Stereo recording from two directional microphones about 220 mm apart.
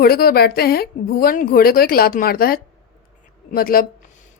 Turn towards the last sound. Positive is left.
turn(degrees=40)  # may be behind; listen again after turning